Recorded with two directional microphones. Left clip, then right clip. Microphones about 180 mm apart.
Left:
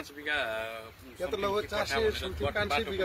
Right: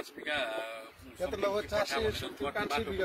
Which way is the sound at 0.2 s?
90° right.